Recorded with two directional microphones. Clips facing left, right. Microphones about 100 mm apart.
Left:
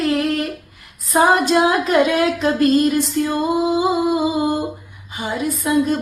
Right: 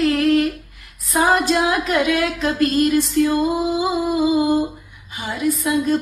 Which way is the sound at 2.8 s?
20° left (ahead or behind).